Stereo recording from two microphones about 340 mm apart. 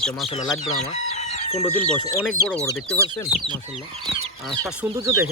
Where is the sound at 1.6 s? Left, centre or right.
Centre.